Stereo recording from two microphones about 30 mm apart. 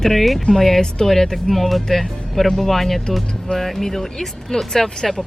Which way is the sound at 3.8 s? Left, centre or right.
Centre.